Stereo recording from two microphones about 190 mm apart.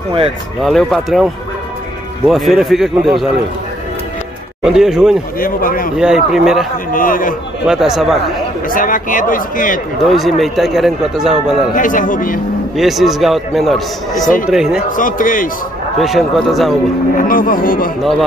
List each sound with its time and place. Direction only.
0.6 s a man's voice: centre (ahead or behind)
4.6 s a man's voice: 5° right (ahead or behind)
5.4 s a man's voice: 50° left (ahead or behind)
5.9 s a man's voice: 5° right (ahead or behind)
6.9 s a man's voice: 45° left (ahead or behind)
7.6 s a man's voice: 5° right (ahead or behind)
8.6 s a man's voice: 45° left (ahead or behind)
10.0 s a man's voice: centre (ahead or behind)
11.7 s a man's voice: 45° left (ahead or behind)
12.7 s a man's voice: centre (ahead or behind)
14.9 s a man's voice: 45° left (ahead or behind)
16.0 s a man's voice: centre (ahead or behind)
17.2 s a man's voice: 45° left (ahead or behind)